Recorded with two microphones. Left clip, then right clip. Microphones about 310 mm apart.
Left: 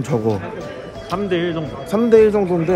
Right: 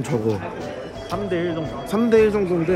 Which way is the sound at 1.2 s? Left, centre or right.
Left.